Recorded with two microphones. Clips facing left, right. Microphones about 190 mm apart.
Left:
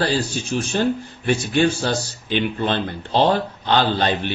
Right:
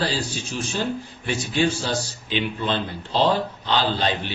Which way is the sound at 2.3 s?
55° left (ahead or behind).